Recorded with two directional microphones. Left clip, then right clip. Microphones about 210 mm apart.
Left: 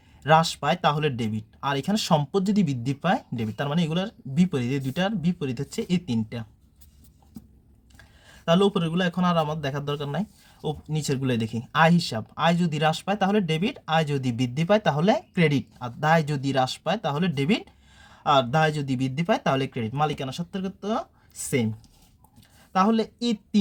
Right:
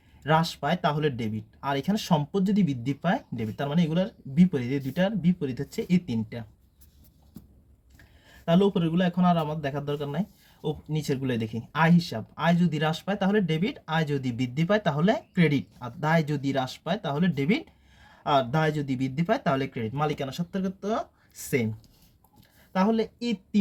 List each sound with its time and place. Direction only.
0.2 s speech: 25° left (ahead or behind)
8.4 s speech: 25° left (ahead or behind)
22.7 s speech: 25° left (ahead or behind)